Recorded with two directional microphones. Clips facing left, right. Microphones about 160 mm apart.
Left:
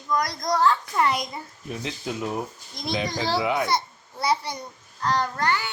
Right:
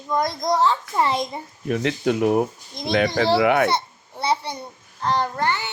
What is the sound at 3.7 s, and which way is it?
A child's voice, 25° right (ahead or behind).